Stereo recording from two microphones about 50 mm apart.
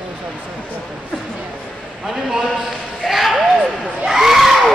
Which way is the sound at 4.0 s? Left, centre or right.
Centre.